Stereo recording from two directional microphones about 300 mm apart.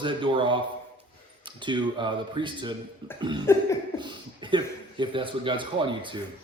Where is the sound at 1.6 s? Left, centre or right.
Centre.